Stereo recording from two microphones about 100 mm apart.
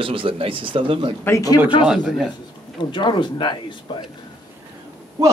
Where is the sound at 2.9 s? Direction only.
50° left (ahead or behind).